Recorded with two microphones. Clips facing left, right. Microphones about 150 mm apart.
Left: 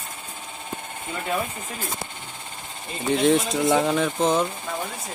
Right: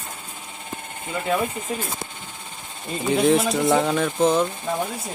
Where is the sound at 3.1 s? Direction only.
Centre (ahead or behind).